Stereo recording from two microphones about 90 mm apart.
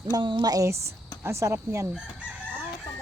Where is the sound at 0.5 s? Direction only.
35° right (ahead or behind).